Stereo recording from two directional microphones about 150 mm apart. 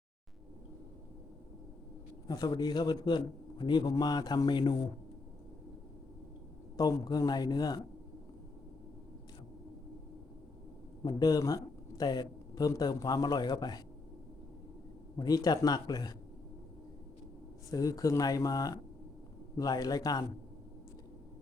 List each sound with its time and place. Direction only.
2.2 s a man's voice: 25° left (ahead or behind)
6.7 s a man's voice: 25° left (ahead or behind)
11.0 s speech: 25° left (ahead or behind)
15.2 s a man's voice: 25° left (ahead or behind)
17.7 s a man's voice: 25° left (ahead or behind)